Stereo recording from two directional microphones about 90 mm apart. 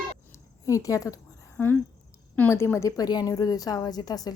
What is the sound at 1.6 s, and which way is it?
Speech, 20° left (ahead or behind).